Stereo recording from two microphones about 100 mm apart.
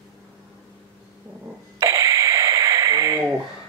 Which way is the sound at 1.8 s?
35° right (ahead or behind).